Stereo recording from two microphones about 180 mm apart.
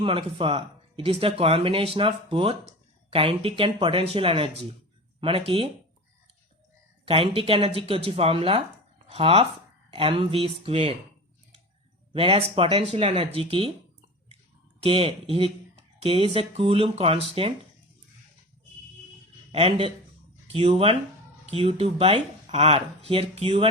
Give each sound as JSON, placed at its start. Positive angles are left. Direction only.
{"t": 0.0, "sound": "speech", "side_deg": -30}
{"t": 7.0, "sound": "speech", "side_deg": -30}
{"t": 12.1, "sound": "speech", "side_deg": -30}
{"t": 14.8, "sound": "speech", "side_deg": -30}
{"t": 19.5, "sound": "speech", "side_deg": -30}